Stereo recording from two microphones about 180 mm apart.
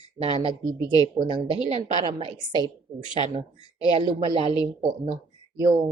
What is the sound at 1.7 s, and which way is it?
Speech, 35° right (ahead or behind).